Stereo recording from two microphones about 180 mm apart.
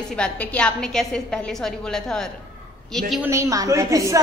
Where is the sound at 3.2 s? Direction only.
15° right (ahead or behind).